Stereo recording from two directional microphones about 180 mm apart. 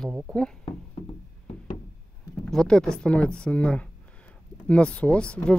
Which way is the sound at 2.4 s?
5° left (ahead or behind).